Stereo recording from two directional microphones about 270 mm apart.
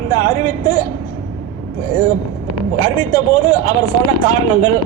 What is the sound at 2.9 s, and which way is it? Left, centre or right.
Speech, centre.